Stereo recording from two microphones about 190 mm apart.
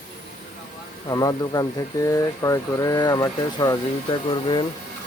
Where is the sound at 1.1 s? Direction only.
20° left (ahead or behind).